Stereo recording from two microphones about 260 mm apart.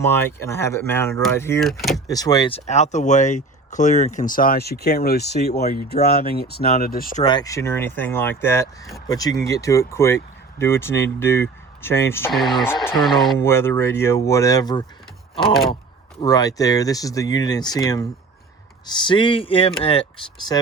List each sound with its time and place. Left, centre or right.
0.0 s speech: centre
2.0 s speech: centre; by 7.3 s left
7.3 s speech: centre
16.2 s speech: centre